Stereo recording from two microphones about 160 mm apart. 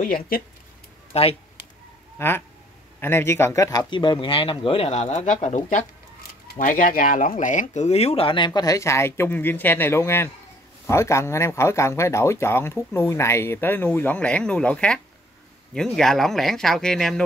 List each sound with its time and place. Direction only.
0.0 s speech: 60° left (ahead or behind)
1.1 s a sound: 40° left (ahead or behind)
2.1 s speech: 15° left (ahead or behind)